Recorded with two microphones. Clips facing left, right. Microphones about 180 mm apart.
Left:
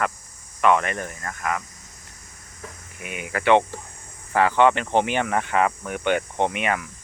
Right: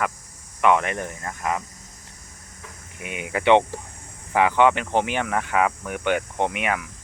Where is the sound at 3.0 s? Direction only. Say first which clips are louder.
Right 2 dB; 20° right (ahead or behind); by 6.8 s 5° right (ahead or behind).